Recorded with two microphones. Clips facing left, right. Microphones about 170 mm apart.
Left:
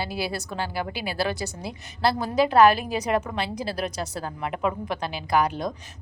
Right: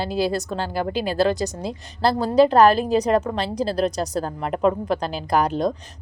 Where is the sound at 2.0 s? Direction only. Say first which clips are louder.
Right 6 dB; 35° right (ahead or behind).